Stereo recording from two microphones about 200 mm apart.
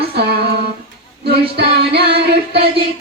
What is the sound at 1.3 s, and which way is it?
Music, 55° right (ahead or behind).